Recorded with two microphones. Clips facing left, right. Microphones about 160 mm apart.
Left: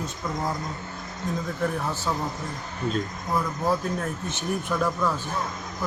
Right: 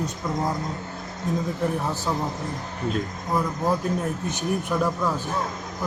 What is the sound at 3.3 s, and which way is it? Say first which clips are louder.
Speech: right 1 dB; 15° right (ahead or behind).